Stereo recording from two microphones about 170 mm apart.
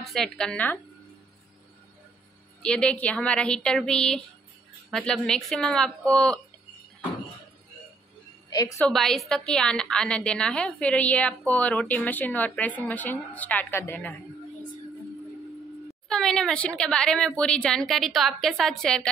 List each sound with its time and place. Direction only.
0.0 s speech: centre (ahead or behind)
2.6 s speech: 5° left (ahead or behind)
8.5 s a woman's voice: 20° left (ahead or behind)
8.8 s a woman's voice: centre (ahead or behind)
16.1 s speech: 5° left (ahead or behind)